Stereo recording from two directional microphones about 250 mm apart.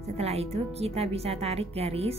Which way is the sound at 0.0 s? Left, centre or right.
Right.